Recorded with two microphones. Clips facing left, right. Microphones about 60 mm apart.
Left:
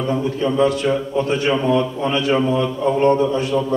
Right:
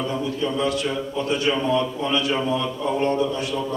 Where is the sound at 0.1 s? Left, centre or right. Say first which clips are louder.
Left 5 dB; left.